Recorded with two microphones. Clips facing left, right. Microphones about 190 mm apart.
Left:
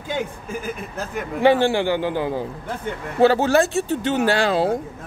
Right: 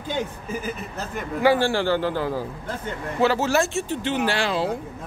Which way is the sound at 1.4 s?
20° left (ahead or behind).